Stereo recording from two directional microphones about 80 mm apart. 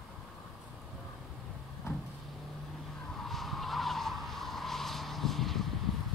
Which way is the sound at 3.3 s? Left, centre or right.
Centre.